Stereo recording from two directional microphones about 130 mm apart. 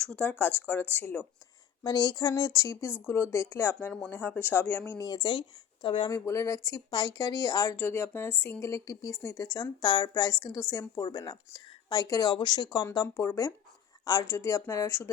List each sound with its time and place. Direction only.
0.0 s speech: 10° left (ahead or behind)
1.8 s speech: 30° left (ahead or behind); by 4.8 s 15° left (ahead or behind)
4.9 s speech: 30° left (ahead or behind)
6.1 s a woman's voice: 25° left (ahead or behind)
7.8 s a woman's voice: 15° left (ahead or behind)